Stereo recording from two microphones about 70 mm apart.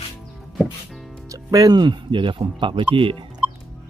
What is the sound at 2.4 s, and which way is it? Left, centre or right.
Speech, right.